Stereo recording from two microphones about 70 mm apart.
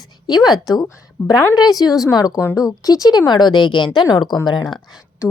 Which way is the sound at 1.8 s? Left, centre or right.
Left.